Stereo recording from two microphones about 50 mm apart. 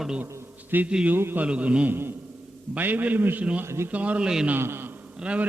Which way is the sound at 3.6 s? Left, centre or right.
Right.